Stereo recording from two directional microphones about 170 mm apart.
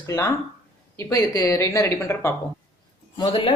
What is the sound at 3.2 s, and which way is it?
Speech, 30° left (ahead or behind).